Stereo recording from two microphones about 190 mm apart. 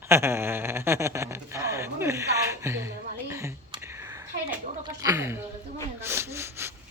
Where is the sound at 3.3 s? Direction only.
15° right (ahead or behind).